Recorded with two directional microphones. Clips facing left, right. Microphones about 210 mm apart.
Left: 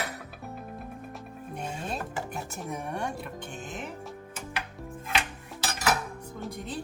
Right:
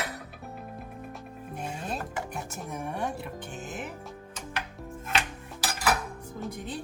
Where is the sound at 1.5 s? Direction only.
Centre (ahead or behind).